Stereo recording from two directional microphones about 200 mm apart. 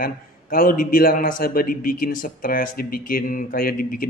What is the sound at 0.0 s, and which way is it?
A man's voice, 45° left (ahead or behind).